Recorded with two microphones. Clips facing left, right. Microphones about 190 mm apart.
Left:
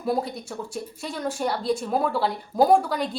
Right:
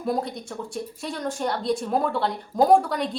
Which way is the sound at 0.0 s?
Centre (ahead or behind).